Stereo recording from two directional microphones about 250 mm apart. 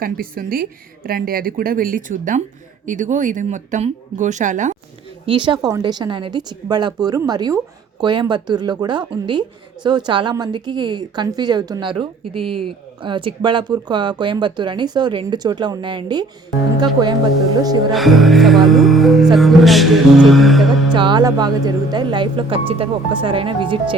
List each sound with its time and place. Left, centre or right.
0.0 s a woman's voice: right
5.2 s speech: centre
12.5 s speech: right
13.0 s speech: centre
17.6 s speech: centre
17.9 s music: centre
20.9 s speech: centre